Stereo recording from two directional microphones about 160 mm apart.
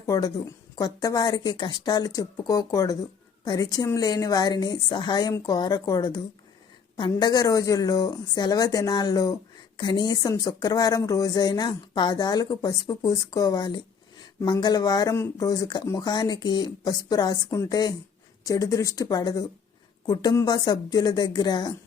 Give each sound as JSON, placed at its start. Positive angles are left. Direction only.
{"t": 0.0, "sound": "speech", "side_deg": 25}